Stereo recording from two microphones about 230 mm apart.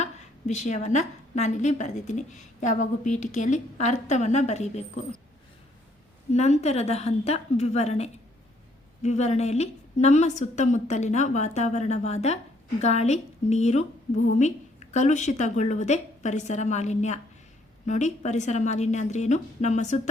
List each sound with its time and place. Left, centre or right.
0.0 s a woman's voice: left
6.3 s a woman's voice: left